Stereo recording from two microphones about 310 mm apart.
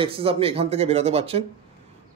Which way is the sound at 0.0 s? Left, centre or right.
Centre.